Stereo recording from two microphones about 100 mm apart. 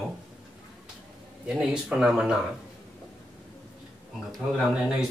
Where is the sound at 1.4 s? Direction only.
10° right (ahead or behind).